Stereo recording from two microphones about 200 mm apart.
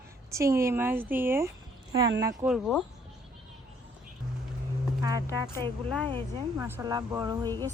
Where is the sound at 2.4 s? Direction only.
5° right (ahead or behind).